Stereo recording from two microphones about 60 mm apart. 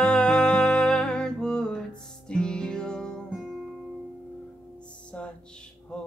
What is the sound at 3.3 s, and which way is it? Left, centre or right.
Music, centre.